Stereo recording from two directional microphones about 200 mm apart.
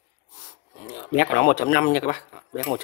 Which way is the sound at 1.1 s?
45° left (ahead or behind).